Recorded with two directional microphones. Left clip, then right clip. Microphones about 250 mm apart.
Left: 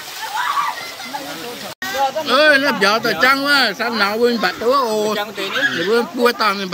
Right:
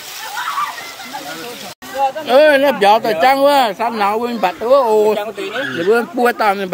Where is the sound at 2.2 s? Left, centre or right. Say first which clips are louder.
Right 3 dB; centre.